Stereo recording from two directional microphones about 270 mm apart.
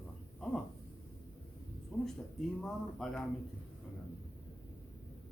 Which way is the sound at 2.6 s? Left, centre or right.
Centre.